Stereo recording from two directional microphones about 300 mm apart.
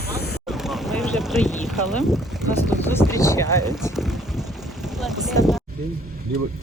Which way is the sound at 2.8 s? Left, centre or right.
Centre.